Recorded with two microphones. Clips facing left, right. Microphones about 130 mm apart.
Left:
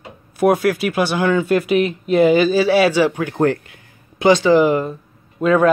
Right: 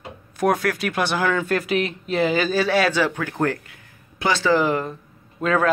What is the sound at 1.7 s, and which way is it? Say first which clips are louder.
Speech: left 6 dB; 35° right (ahead or behind).